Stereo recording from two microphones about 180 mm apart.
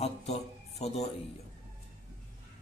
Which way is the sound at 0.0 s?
35° left (ahead or behind).